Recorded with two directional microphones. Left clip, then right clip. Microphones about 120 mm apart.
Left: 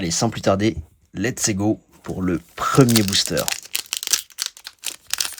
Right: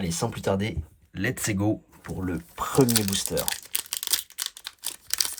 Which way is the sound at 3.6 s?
5° left (ahead or behind).